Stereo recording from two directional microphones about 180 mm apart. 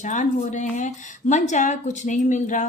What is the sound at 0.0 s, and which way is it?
A woman's voice, 45° left (ahead or behind).